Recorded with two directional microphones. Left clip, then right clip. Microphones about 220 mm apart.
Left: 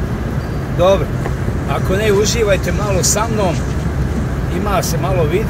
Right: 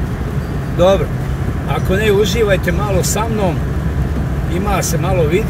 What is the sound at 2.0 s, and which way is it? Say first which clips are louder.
Speech: right 1 dB; 20° right (ahead or behind).